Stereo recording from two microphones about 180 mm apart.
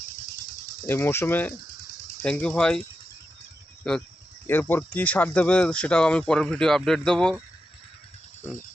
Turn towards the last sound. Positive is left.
turn(degrees=5)  # may be behind; listen again after turning